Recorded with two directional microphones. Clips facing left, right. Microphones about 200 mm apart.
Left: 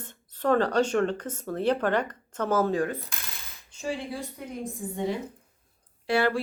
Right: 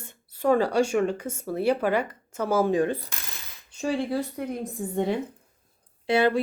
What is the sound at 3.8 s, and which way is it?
Speech, 65° right (ahead or behind).